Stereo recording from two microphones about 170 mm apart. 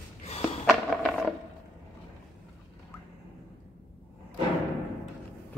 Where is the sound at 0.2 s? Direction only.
35° left (ahead or behind).